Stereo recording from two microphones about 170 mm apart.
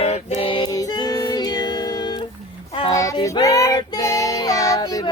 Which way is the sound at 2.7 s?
25° left (ahead or behind).